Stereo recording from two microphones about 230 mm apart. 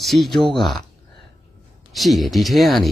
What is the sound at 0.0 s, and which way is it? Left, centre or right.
Speech, centre.